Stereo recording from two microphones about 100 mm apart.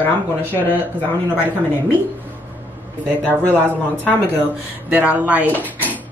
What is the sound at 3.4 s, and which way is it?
Speech, 15° left (ahead or behind).